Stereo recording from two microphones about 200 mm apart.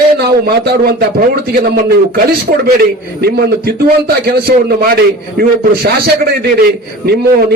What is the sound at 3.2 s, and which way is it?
A man's voice, 50° right (ahead or behind).